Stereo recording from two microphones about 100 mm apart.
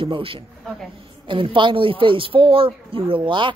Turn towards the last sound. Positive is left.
turn(degrees=-55)  # may be behind; listen again after turning